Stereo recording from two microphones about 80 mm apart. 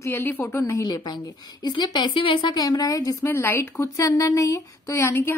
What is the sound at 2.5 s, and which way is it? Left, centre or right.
Speech, left.